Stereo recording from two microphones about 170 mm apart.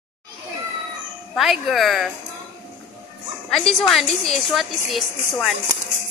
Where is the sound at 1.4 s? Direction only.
Centre (ahead or behind).